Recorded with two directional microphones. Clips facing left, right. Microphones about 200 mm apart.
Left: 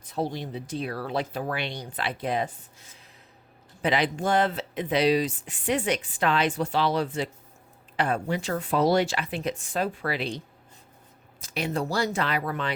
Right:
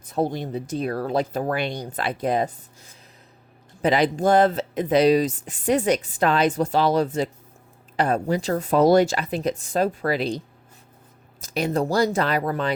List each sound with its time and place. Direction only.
0.0 s speech: 50° right (ahead or behind)
3.8 s speech: 40° right (ahead or behind)